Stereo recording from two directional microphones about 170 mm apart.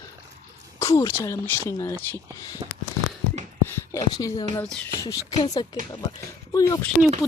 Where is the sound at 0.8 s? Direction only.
20° left (ahead or behind).